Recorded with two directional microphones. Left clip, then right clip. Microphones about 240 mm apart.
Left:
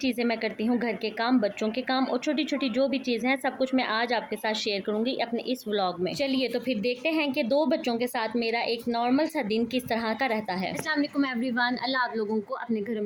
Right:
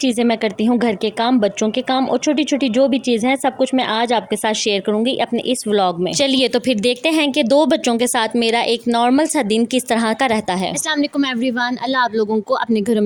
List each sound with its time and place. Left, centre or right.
0.0 s speech: right